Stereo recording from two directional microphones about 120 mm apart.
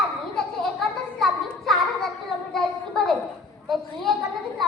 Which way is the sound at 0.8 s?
Centre (ahead or behind).